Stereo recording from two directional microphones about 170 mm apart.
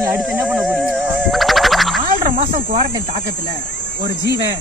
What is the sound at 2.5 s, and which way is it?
Speech, 50° right (ahead or behind).